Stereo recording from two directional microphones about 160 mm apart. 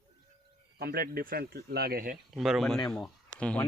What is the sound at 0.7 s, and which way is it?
Speech, 75° right (ahead or behind).